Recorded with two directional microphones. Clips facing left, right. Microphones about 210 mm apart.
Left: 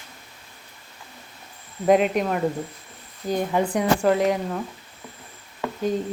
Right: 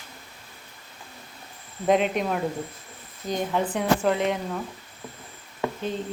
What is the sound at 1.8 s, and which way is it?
Speech, 5° left (ahead or behind).